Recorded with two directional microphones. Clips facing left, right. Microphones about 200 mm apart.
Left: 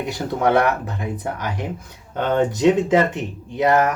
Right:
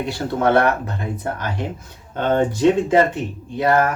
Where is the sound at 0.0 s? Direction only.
15° left (ahead or behind).